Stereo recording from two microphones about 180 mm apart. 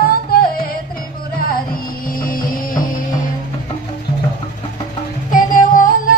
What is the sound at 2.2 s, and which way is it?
Music, 50° left (ahead or behind).